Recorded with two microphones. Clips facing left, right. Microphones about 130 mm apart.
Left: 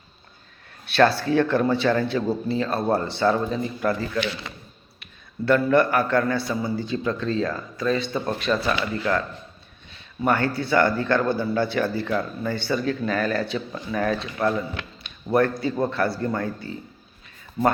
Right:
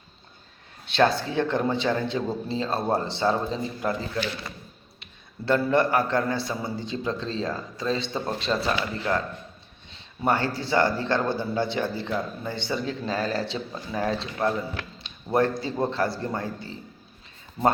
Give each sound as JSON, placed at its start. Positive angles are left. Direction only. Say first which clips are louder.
{"t": 0.9, "sound": "speech", "louder": "left 3 dB", "side_deg": -20}
{"t": 4.2, "sound": "speech", "louder": "left 3 dB", "side_deg": 80}
{"t": 5.5, "sound": "speech", "louder": "left 3 dB", "side_deg": -25}
{"t": 15.0, "sound": "a sound", "louder": "left 3 dB", "side_deg": -25}
{"t": 15.6, "sound": "speech", "louder": "left 2 dB", "side_deg": -25}